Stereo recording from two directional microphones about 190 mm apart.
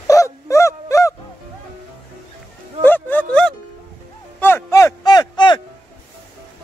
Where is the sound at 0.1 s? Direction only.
15° left (ahead or behind).